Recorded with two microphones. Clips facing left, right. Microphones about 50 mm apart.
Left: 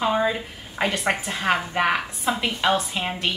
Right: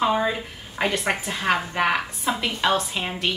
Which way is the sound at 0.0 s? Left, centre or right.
Centre.